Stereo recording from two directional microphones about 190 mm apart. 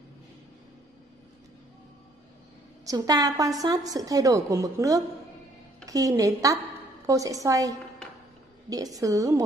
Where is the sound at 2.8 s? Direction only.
20° right (ahead or behind).